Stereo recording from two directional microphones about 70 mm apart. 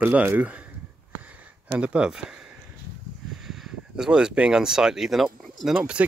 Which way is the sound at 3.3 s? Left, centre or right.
Centre.